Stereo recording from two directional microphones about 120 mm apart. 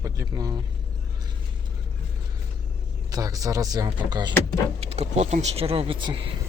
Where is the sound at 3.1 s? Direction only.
30° right (ahead or behind).